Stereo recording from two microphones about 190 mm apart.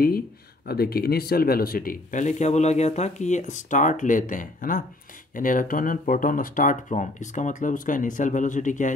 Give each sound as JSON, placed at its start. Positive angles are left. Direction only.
{"t": 0.7, "sound": "speech", "side_deg": 55}